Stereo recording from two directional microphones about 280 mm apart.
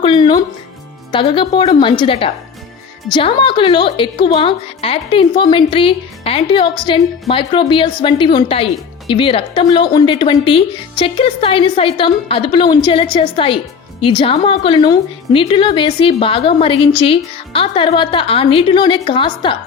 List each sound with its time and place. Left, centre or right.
0.0 s a woman's voice: centre